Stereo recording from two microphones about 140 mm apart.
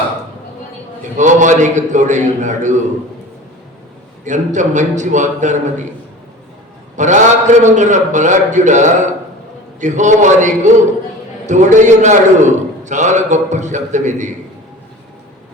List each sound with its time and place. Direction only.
1.1 s a man's voice: 60° right (ahead or behind)
4.2 s a man's voice: 60° right (ahead or behind)
6.9 s a man's voice: 60° right (ahead or behind)